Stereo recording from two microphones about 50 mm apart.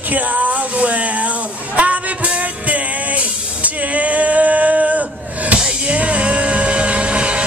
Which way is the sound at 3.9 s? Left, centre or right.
Right.